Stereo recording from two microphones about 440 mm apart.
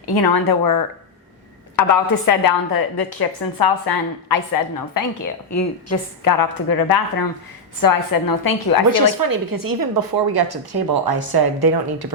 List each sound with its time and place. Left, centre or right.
0.1 s a woman's voice: left
1.9 s a woman's voice: left
8.9 s speech: right